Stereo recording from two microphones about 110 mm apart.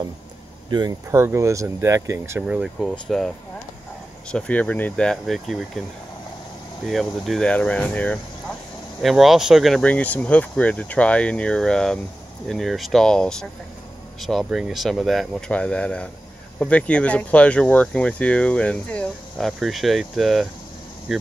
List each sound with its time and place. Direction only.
0.7 s speech: 40° right (ahead or behind)
1.1 s speech: 25° right (ahead or behind)
2.4 s speech: 5° right (ahead or behind)
6.9 s speech: centre (ahead or behind)
9.0 s speech: centre (ahead or behind)
9.8 s speech: 15° left (ahead or behind)